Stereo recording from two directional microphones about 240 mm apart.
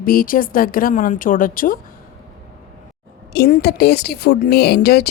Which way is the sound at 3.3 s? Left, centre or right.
Left.